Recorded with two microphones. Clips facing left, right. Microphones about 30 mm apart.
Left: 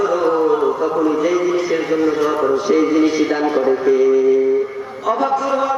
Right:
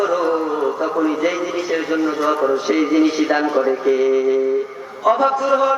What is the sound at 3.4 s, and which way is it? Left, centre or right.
Speech, centre.